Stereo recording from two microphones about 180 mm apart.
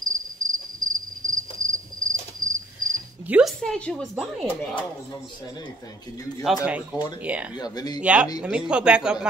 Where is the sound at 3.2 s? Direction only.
5° right (ahead or behind).